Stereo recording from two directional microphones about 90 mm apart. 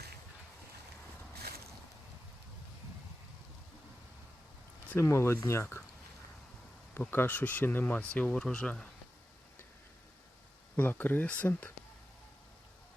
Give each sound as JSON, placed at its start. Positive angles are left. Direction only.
{"t": 4.9, "sound": "speech", "side_deg": 30}
{"t": 6.9, "sound": "speech", "side_deg": 25}
{"t": 10.8, "sound": "speech", "side_deg": 20}